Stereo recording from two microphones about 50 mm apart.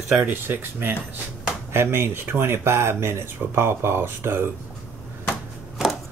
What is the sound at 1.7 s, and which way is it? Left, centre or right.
Speech, right.